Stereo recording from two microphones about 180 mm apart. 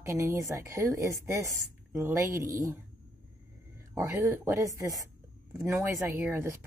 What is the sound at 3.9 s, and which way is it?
A woman's voice, 20° right (ahead or behind).